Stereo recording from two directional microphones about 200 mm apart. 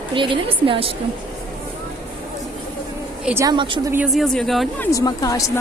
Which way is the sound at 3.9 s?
5° right (ahead or behind).